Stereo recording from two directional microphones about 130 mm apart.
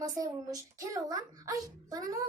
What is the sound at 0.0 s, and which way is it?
A child's voice, 25° right (ahead or behind).